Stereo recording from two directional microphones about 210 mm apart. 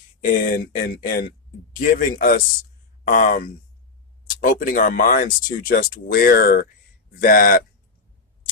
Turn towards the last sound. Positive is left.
turn(degrees=40)  # may be behind; listen again after turning